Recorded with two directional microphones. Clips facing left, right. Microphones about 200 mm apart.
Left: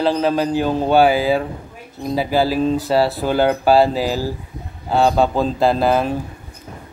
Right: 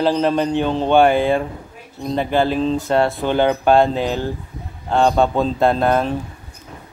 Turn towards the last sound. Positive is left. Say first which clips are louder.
# even
turn(degrees=5)  # may be behind; listen again after turning